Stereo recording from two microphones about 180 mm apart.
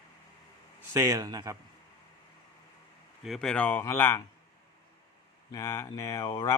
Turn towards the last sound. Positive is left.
turn(degrees=20)  # may be behind; listen again after turning